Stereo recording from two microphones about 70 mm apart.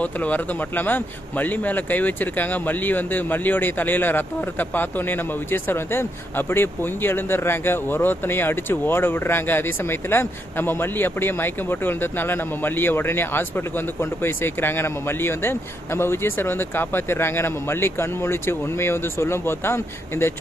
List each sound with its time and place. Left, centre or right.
0.0 s speech: left